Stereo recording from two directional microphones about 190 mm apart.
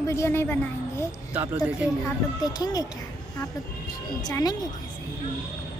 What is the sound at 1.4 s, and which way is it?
Speech, 10° right (ahead or behind).